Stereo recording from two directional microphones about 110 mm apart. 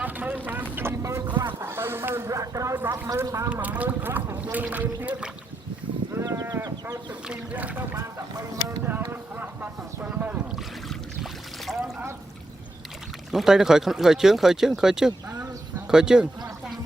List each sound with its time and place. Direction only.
0.0 s speech: 15° right (ahead or behind)
3.5 s speech: 15° right (ahead or behind)
6.1 s sheep: 30° right (ahead or behind)
7.1 s speech: 15° right (ahead or behind)
8.8 s a sound: 15° right (ahead or behind)
10.8 s boat: centre (ahead or behind)
13.3 s speech: 5° right (ahead or behind)